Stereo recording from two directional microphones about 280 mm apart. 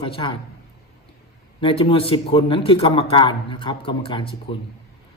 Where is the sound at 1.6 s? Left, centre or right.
Centre.